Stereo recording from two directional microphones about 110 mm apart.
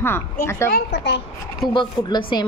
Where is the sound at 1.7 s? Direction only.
45° left (ahead or behind).